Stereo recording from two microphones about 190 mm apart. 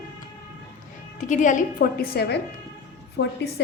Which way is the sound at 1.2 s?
40° left (ahead or behind).